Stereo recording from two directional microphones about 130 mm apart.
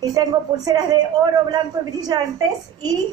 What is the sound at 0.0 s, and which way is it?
A woman's voice, 30° right (ahead or behind).